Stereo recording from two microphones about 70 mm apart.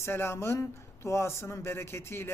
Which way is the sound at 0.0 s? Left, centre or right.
Left.